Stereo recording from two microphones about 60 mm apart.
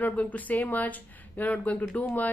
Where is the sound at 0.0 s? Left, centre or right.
Left.